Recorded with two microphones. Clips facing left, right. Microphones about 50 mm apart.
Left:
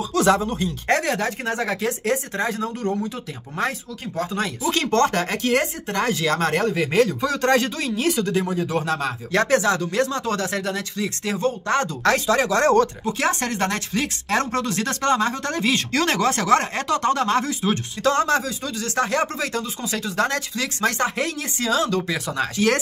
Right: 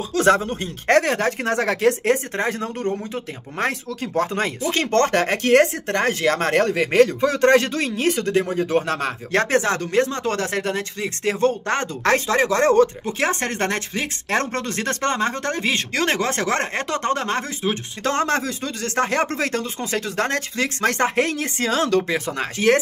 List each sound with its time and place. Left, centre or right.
0.1 s speech: right
1.5 s speech: right
7.2 s speech: right
9.5 s speech: right
10.2 s speech: right
15.6 s speech: right
22.0 s speech: right